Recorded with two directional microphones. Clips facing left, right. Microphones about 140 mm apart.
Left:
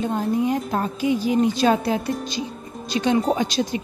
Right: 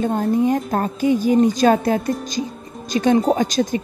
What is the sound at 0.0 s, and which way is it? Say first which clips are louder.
Speech: right 4 dB; 45° right (ahead or behind).